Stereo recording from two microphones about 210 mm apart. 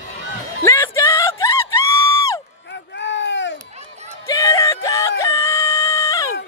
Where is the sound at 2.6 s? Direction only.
55° left (ahead or behind).